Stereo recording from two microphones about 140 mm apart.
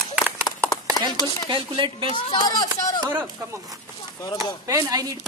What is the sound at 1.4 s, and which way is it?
Chopping, 35° right (ahead or behind).